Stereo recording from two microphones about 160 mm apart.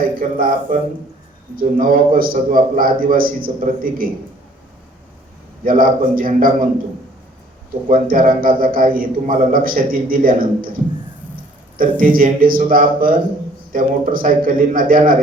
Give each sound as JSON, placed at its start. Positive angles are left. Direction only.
{"t": 0.2, "sound": "a man's voice", "side_deg": -60}
{"t": 5.6, "sound": "a man's voice", "side_deg": -60}
{"t": 7.9, "sound": "a man's voice", "side_deg": -60}
{"t": 11.8, "sound": "a man's voice", "side_deg": -60}